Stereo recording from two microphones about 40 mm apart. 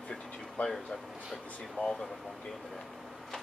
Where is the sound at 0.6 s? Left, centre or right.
Left.